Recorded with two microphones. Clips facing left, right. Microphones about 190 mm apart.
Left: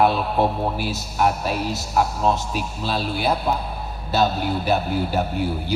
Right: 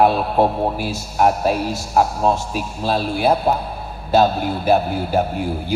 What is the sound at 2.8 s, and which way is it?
A man's voice, 40° right (ahead or behind).